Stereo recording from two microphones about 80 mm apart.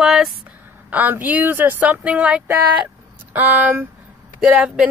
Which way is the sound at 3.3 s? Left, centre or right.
Centre.